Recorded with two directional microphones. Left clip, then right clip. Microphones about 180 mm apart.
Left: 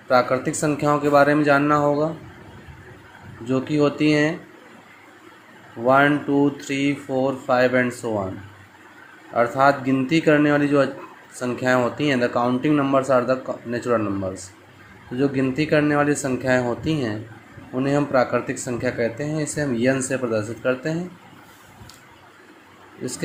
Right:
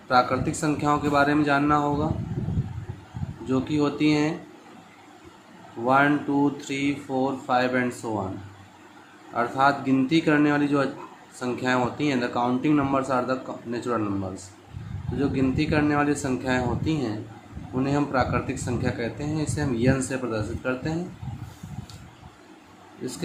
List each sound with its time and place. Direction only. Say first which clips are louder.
0.1 s speech: left 3 dB; 25° left (ahead or behind)
3.5 s speech: left 4 dB; 25° left (ahead or behind)
5.8 s speech: left 4 dB; 25° left (ahead or behind)
9.3 s speech: left 4 dB; 30° left (ahead or behind)